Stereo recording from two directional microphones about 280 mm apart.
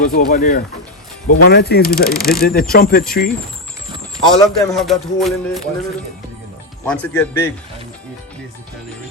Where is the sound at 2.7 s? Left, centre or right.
Left.